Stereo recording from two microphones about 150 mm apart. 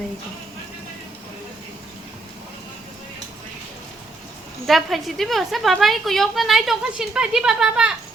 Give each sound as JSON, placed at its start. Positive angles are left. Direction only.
{"t": 4.6, "sound": "a woman's voice", "side_deg": 0}